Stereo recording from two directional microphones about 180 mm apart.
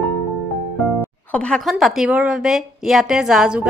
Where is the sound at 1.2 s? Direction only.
5° left (ahead or behind).